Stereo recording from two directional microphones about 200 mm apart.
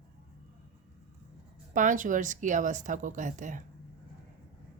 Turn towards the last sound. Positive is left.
turn(degrees=-40)  # may be behind; listen again after turning